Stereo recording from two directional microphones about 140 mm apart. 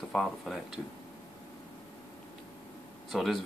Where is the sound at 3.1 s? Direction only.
Centre (ahead or behind).